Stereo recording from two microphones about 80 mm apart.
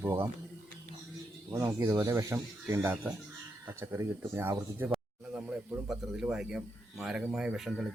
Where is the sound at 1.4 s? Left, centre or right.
Right.